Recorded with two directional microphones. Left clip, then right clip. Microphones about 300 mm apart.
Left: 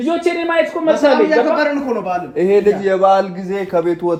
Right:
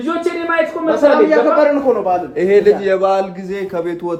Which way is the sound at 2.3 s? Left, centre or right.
Centre.